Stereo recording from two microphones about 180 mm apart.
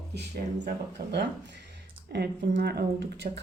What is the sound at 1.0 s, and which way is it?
Speech, 60° right (ahead or behind).